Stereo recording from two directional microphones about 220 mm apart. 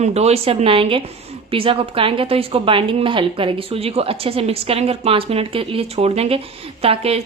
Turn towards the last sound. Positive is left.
turn(degrees=-25)  # may be behind; listen again after turning